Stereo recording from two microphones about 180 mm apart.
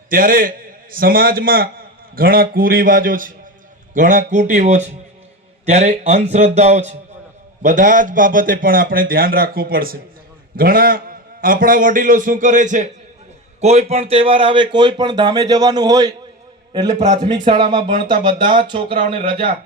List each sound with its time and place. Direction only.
0.1 s a man's voice: 50° right (ahead or behind); by 19.5 s 30° right (ahead or behind)